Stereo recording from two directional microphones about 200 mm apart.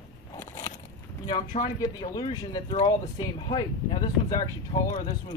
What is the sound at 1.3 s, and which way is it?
Speech, 25° left (ahead or behind).